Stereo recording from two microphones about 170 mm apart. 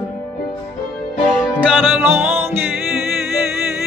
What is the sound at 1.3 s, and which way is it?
Music, 5° right (ahead or behind).